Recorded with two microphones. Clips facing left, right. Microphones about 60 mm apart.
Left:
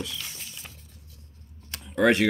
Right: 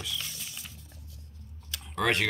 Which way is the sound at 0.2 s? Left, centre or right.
Left.